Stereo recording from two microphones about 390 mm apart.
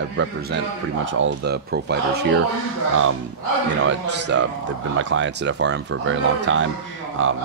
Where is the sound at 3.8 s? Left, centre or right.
Right.